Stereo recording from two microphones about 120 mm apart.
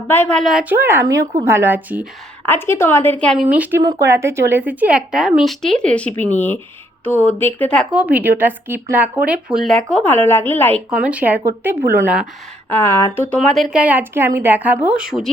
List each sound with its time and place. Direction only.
0.1 s a woman's voice: 15° left (ahead or behind)
0.4 s speech: 5° right (ahead or behind)
0.7 s speech: 20° right (ahead or behind)
2.5 s a woman's voice: 20° left (ahead or behind)
3.3 s speech: 10° right (ahead or behind)
3.8 s a woman's voice: 25° right (ahead or behind); by 7.8 s 15° left (ahead or behind)
7.9 s speech: 10° right (ahead or behind); by 10.8 s 15° left (ahead or behind)
10.9 s speech: 10° right (ahead or behind)
12.7 s a woman's voice: 20° left (ahead or behind)
13.4 s speech: centre (ahead or behind)